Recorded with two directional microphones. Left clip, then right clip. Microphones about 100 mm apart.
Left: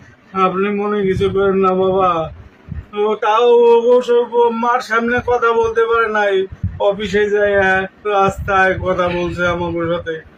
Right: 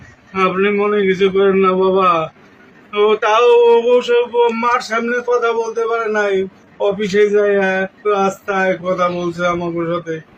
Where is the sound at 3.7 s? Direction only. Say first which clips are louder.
Left 1 dB; 25° left (ahead or behind).